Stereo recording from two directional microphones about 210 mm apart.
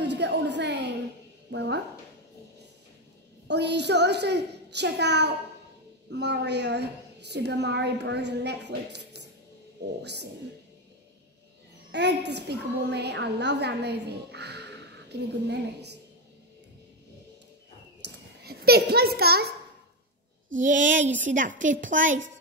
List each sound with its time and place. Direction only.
0.0 s a sound: 55° right (ahead or behind)
1.5 s a woman's voice: 55° right (ahead or behind)
3.4 s a woman's voice: 55° right (ahead or behind)
11.9 s a woman's voice: 55° right (ahead or behind)
18.0 s a sound: 50° right (ahead or behind)
20.6 s a woman's voice: 35° right (ahead or behind)